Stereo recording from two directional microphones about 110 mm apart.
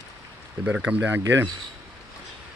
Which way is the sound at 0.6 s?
10° right (ahead or behind).